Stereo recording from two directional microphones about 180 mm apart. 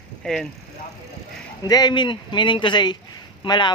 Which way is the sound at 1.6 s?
20° left (ahead or behind).